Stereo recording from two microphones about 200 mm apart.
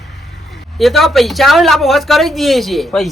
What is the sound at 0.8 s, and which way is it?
Speech, centre (ahead or behind).